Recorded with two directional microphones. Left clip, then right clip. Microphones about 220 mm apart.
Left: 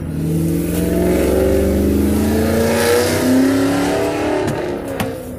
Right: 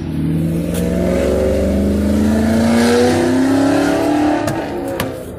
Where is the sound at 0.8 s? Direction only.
50° left (ahead or behind).